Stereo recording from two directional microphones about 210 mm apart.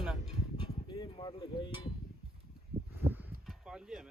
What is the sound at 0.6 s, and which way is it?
Speech, 20° left (ahead or behind).